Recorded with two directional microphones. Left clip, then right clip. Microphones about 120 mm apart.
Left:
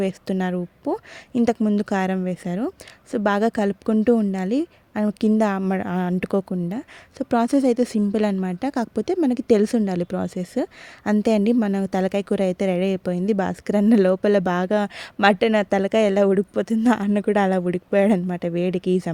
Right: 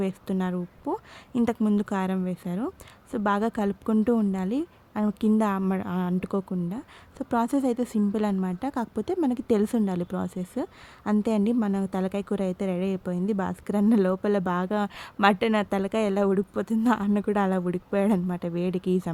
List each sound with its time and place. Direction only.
0.0 s a woman's voice: 45° left (ahead or behind)
0.9 s a woman's voice: 40° left (ahead or behind)